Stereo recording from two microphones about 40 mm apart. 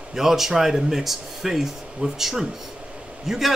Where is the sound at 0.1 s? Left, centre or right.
Centre.